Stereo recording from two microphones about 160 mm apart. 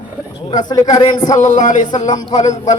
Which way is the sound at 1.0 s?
50° left (ahead or behind).